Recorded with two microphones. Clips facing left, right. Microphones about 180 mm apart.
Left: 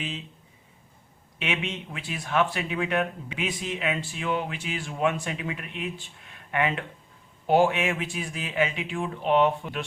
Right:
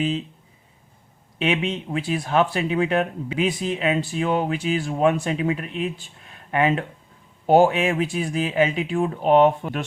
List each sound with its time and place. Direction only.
1.4 s speech: 35° right (ahead or behind)